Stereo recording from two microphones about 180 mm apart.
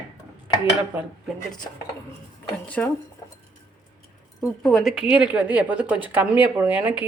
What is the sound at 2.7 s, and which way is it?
Speech, 10° left (ahead or behind).